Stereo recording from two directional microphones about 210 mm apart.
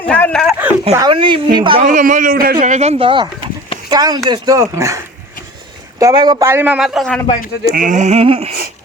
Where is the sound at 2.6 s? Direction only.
35° right (ahead or behind); by 7.2 s centre (ahead or behind).